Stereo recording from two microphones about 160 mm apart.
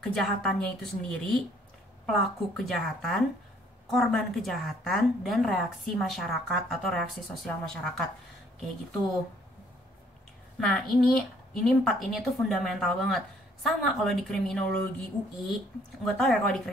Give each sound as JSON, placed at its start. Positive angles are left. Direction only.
{"t": 0.0, "sound": "a woman's voice", "side_deg": 5}
{"t": 10.6, "sound": "a woman's voice", "side_deg": 5}
{"t": 16.1, "sound": "a woman's voice", "side_deg": 5}